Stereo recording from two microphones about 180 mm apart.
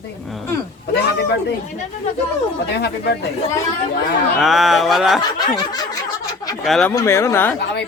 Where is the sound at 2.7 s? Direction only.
65° left (ahead or behind).